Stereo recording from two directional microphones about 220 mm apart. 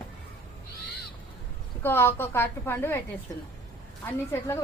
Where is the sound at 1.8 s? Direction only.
10° left (ahead or behind).